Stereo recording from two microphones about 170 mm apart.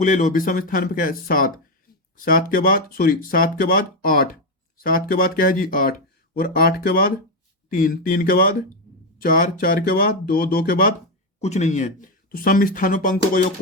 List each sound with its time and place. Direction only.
0.0 s speech: 50° left (ahead or behind)
11.3 s speech: 40° left (ahead or behind)